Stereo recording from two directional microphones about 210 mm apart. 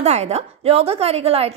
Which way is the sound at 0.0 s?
30° right (ahead or behind).